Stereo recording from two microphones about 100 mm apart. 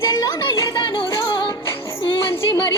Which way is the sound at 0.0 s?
35° left (ahead or behind).